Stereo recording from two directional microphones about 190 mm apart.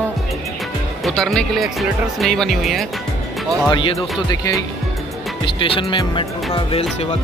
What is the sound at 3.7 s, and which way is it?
Speech, 25° left (ahead or behind).